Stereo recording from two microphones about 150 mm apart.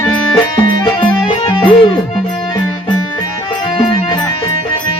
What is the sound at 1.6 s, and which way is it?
Music, 30° left (ahead or behind).